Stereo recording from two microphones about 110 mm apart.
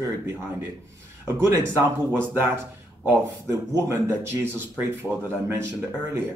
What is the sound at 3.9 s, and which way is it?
Speech, 20° right (ahead or behind).